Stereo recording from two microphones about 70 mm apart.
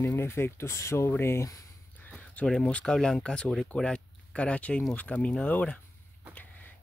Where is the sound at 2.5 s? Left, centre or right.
Centre.